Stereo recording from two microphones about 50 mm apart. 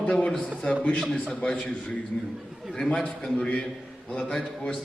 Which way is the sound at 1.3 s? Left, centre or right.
Centre.